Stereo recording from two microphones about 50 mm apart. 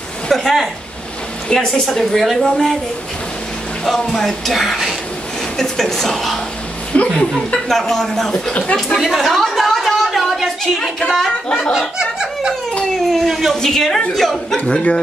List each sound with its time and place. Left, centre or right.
0.3 s speech: centre
1.7 s speech: centre
3.8 s speech: centre
6.9 s speech: left
7.6 s speech: centre
9.0 s a woman's voice: centre
9.3 s a sound: centre
11.4 s speech: centre
12.0 s snicker: centre
12.9 s speech: centre
13.6 s speech: centre
14.7 s speech: left